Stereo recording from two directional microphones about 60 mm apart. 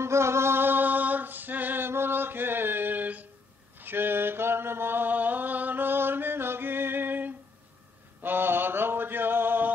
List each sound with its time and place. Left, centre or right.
0.0 s music: right
3.7 s mantra: right
8.2 s male singing: right